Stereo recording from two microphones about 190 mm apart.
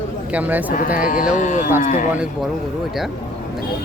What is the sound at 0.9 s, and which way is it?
Speech, 45° left (ahead or behind).